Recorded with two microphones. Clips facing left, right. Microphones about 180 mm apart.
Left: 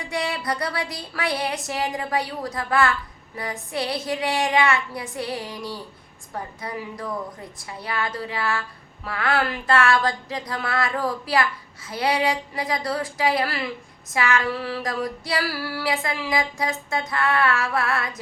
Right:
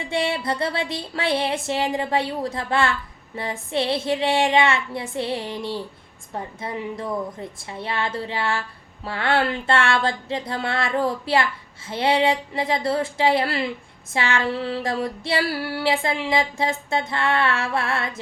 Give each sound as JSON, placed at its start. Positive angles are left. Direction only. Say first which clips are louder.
{"t": 0.0, "sound": "a woman's voice", "louder": "right 3 dB", "side_deg": -25}